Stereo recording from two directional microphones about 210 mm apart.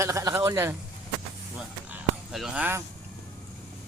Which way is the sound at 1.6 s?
Centre (ahead or behind).